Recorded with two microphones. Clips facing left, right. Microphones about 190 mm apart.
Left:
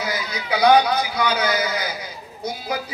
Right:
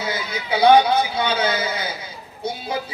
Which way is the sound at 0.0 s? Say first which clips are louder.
Even; 25° right (ahead or behind).